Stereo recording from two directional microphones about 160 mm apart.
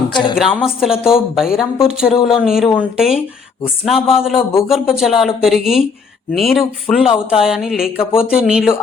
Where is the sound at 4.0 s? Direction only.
35° left (ahead or behind).